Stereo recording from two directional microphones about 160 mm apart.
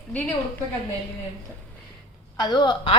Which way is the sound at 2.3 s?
25° left (ahead or behind).